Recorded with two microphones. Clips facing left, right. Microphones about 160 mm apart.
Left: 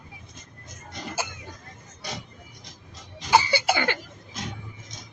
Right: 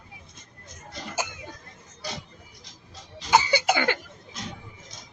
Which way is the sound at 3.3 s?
20° right (ahead or behind).